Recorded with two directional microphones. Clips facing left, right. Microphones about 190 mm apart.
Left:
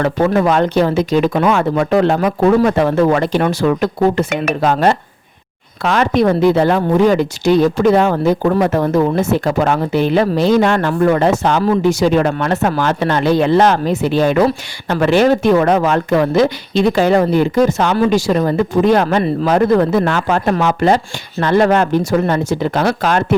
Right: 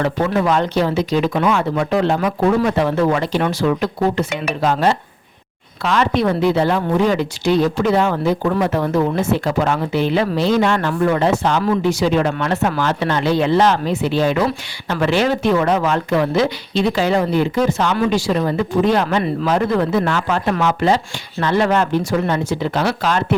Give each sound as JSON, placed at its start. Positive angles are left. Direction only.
{"t": 0.0, "sound": "speech", "side_deg": 50}
{"t": 11.6, "sound": "speech", "side_deg": 40}